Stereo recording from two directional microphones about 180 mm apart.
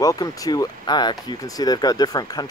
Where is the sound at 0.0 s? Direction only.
20° left (ahead or behind).